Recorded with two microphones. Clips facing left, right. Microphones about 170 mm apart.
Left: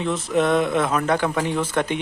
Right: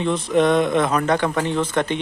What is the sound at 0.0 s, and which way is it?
Speech, 5° left (ahead or behind).